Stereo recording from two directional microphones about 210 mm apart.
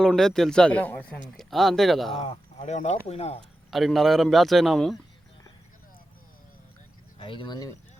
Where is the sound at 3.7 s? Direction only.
Centre (ahead or behind).